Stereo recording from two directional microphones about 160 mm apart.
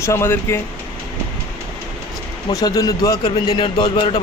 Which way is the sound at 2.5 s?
25° left (ahead or behind).